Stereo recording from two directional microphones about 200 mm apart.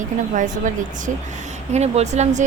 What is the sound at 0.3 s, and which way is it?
Speech, 40° right (ahead or behind).